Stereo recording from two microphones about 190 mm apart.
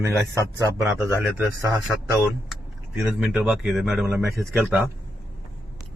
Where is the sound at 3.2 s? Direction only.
5° right (ahead or behind).